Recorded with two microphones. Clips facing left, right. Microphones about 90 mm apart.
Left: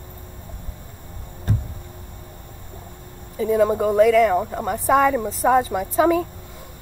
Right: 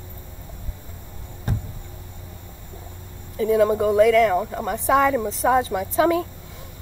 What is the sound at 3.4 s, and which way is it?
Speech, centre (ahead or behind).